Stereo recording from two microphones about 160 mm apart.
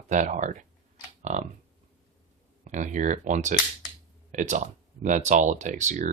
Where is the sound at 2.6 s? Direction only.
50° right (ahead or behind).